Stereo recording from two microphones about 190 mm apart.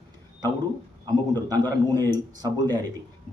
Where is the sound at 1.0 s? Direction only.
20° right (ahead or behind).